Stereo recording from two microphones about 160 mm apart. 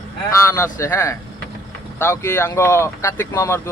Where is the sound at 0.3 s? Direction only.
20° left (ahead or behind).